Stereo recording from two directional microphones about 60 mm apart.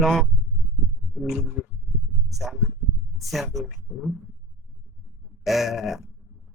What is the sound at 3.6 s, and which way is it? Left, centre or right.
Speech, centre.